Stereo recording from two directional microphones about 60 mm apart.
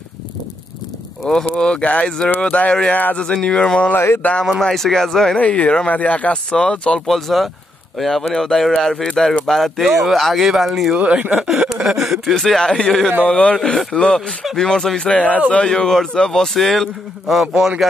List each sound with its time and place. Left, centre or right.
1.3 s speech: centre
3.9 s speech: left
4.5 s a man's voice: centre
5.4 s speech: centre
7.1 s a man's voice: centre
11.0 s speech: right
11.3 s a man's voice: centre
13.6 s a man's voice: centre
13.9 s a man's voice: centre